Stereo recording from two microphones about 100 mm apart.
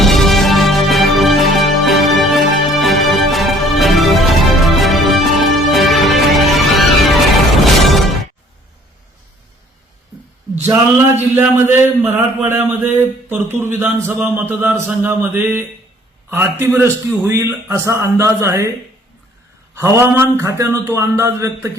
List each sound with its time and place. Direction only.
0.0 s music: centre (ahead or behind)
10.9 s speech: 20° right (ahead or behind)
19.7 s speech: 30° right (ahead or behind)